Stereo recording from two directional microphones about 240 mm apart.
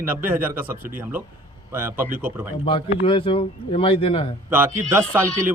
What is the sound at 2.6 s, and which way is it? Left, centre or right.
Speech, left.